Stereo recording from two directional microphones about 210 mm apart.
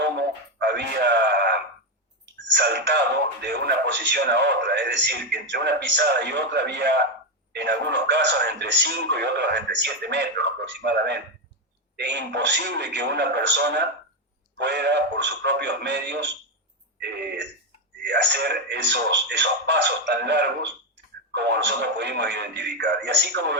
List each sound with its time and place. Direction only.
0.0 s a sound: 55° right (ahead or behind)
3.4 s a man's voice: 55° right (ahead or behind)
17.0 s throat clearing: 55° right (ahead or behind)
18.1 s a man's voice: 50° right (ahead or behind)